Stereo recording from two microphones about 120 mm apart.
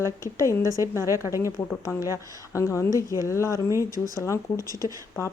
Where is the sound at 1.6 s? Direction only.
20° left (ahead or behind).